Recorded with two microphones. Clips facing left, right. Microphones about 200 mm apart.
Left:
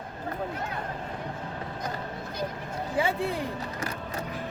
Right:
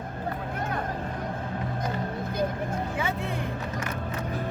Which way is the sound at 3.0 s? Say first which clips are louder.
Left 3 dB; 30° left (ahead or behind).